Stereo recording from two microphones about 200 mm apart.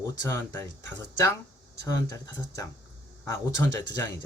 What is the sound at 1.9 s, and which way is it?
Speech, 15° left (ahead or behind).